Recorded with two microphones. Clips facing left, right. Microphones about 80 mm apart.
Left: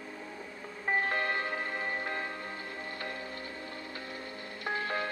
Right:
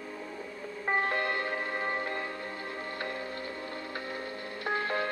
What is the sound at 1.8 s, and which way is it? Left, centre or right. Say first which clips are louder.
Music: right 2 dB; right.